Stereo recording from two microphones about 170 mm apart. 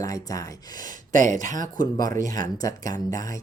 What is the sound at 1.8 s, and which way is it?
Speech, 20° left (ahead or behind).